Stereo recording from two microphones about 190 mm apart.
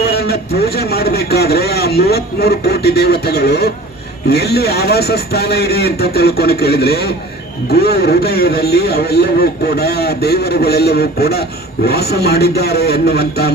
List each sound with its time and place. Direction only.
0.0 s speech: 55° left (ahead or behind)